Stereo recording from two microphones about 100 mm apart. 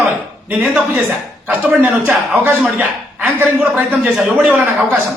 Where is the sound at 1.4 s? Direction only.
15° right (ahead or behind).